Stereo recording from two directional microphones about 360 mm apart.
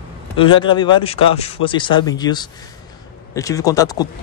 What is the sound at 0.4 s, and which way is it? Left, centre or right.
Speech, centre.